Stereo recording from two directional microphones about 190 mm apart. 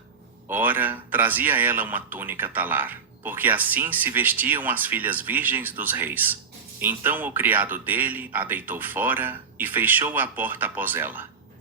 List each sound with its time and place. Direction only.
0.4 s speech: 10° right (ahead or behind)